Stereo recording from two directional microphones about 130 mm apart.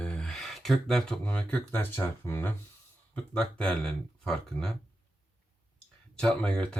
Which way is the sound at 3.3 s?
5° left (ahead or behind).